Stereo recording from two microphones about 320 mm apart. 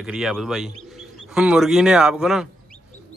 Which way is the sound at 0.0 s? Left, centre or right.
Centre.